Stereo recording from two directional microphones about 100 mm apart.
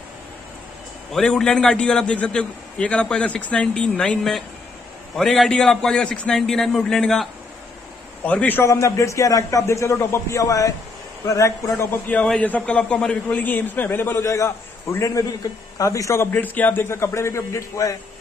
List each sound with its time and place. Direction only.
1.1 s a man's voice: 5° left (ahead or behind)
8.2 s a man's voice: 15° left (ahead or behind)
8.6 s a man's voice: 30° left (ahead or behind)
12.3 s a man's voice: 15° left (ahead or behind); by 17.9 s 30° left (ahead or behind)